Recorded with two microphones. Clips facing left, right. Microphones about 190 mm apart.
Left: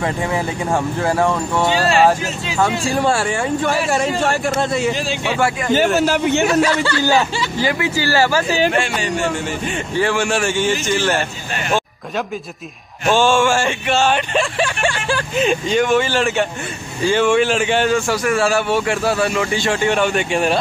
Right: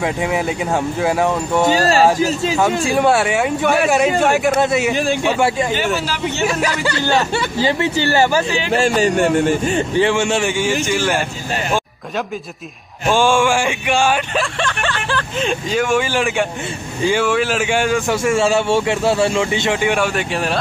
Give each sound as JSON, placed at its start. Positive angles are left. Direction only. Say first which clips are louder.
{"t": 0.0, "sound": "a man's voice", "louder": "right 1 dB", "side_deg": -5}
{"t": 1.7, "sound": "speech", "louder": "even", "side_deg": -40}
{"t": 2.9, "sound": "speech", "louder": "right 3 dB", "side_deg": -5}
{"t": 4.6, "sound": "a man's voice", "louder": "right 2 dB", "side_deg": -5}
{"t": 4.9, "sound": "a man's voice", "louder": "right 5 dB", "side_deg": -55}
{"t": 5.9, "sound": "a man's voice", "louder": "left 6 dB", "side_deg": 50}
{"t": 6.6, "sound": "a man's voice", "louder": "left 3 dB", "side_deg": -15}
{"t": 8.7, "sound": "speech", "louder": "right 5 dB", "side_deg": -40}
{"t": 9.1, "sound": "speech", "louder": "right 6 dB", "side_deg": -55}
{"t": 9.9, "sound": "a man's voice", "louder": "even", "side_deg": -20}
{"t": 10.5, "sound": "a man's voice", "louder": "even", "side_deg": -10}
{"t": 13.1, "sound": "a man's voice", "louder": "even", "side_deg": -15}
{"t": 14.6, "sound": "vehicle", "louder": "left 2 dB", "side_deg": 10}
{"t": 15.7, "sound": "a man's voice", "louder": "right 1 dB", "side_deg": -10}